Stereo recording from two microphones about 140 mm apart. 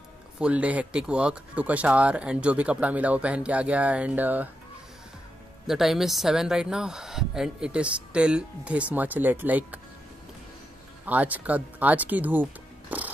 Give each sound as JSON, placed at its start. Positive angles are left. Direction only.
{"t": 0.4, "sound": "speech", "side_deg": -10}
{"t": 5.7, "sound": "speech", "side_deg": 0}
{"t": 11.1, "sound": "speech", "side_deg": -10}
{"t": 12.9, "sound": "music", "side_deg": -10}